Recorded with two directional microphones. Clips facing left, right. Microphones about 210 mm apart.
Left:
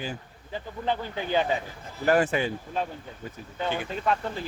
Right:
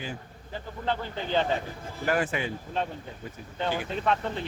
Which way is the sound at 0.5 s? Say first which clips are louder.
Left 2 dB; 15° left (ahead or behind).